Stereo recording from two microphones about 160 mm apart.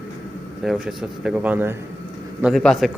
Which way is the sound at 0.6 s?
5° right (ahead or behind).